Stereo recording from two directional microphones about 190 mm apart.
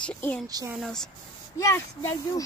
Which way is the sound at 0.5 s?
20° right (ahead or behind).